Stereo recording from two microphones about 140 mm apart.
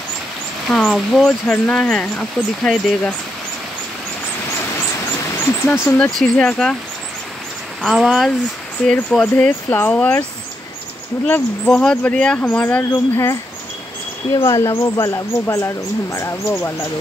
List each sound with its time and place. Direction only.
0.7 s speech: 5° left (ahead or behind)
5.5 s speech: 20° left (ahead or behind)
6.1 s speech: 5° left (ahead or behind)
7.8 s speech: centre (ahead or behind); by 10.2 s 15° left (ahead or behind)
11.2 s speech: 10° left (ahead or behind)